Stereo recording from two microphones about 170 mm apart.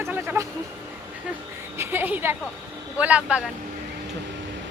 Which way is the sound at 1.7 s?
15° right (ahead or behind).